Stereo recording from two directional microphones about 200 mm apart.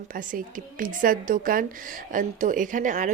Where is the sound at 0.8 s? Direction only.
45° right (ahead or behind).